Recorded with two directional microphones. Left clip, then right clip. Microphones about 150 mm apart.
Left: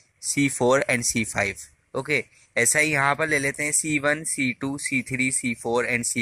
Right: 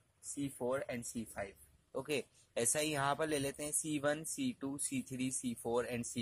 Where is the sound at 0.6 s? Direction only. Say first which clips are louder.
Left 17 dB; 25° left (ahead or behind).